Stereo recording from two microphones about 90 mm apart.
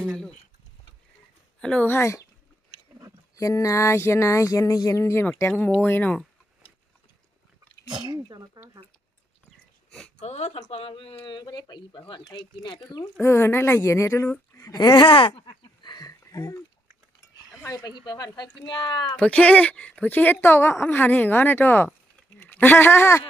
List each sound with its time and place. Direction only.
1.6 s speech: 15° left (ahead or behind)
1.9 s a sound: 30° left (ahead or behind)
3.3 s a sound: 40° left (ahead or behind)
5.4 s speech: 30° left (ahead or behind)
7.9 s speech: 50° right (ahead or behind)
10.7 s speech: 90° left; by 13.1 s 55° left (ahead or behind)
13.2 s speech: 25° left (ahead or behind); by 15.0 s 45° left (ahead or behind)
15.0 s a sound: 75° left (ahead or behind); by 16.1 s 50° left (ahead or behind)
16.3 s speech: 40° left (ahead or behind)
17.6 s speech: 35° left (ahead or behind)
18.0 s speech: 50° left (ahead or behind)
18.7 s speech: 60° left (ahead or behind)
19.1 s speech: 15° left (ahead or behind)